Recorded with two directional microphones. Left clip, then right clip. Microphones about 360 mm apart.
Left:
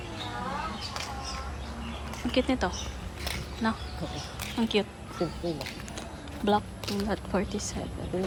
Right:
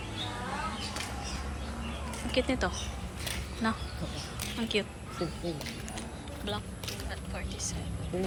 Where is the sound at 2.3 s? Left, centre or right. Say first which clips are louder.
Left 2 dB; centre.